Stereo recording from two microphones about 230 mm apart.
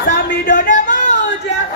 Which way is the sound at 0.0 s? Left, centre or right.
Left.